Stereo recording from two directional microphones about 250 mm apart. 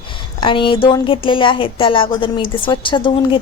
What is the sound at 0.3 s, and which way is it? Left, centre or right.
A woman's voice, centre.